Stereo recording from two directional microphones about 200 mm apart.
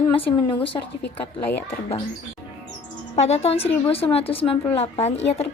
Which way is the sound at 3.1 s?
35° left (ahead or behind).